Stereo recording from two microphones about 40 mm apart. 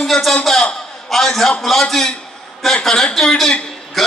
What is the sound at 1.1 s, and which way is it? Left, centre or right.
Speech, centre.